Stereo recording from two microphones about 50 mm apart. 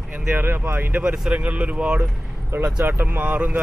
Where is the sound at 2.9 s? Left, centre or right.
Right.